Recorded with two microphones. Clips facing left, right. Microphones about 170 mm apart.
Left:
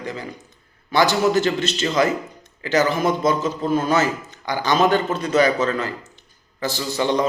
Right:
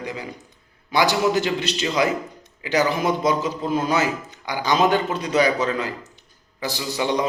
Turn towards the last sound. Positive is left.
turn(degrees=-15)  # may be behind; listen again after turning